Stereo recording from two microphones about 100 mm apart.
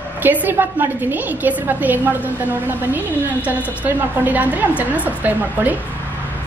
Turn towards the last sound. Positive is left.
turn(degrees=-15)  # may be behind; listen again after turning